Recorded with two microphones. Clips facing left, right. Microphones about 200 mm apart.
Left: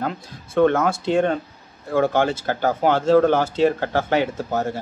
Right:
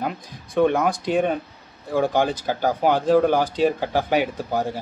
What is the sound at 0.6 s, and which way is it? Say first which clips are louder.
Speech: left 2 dB; 15° right (ahead or behind).